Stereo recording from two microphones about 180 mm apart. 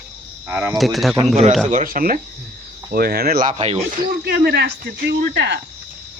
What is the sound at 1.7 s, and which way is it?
Speech, 50° right (ahead or behind).